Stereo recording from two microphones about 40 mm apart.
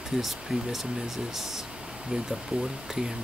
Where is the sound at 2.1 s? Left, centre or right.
Right.